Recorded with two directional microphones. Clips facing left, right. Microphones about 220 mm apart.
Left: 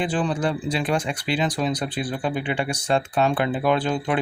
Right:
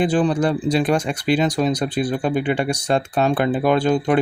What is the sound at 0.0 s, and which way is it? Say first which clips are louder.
Speech: right 6 dB; 40° right (ahead or behind).